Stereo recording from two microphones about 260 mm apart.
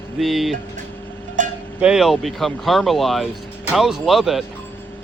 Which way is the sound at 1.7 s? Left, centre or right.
Centre.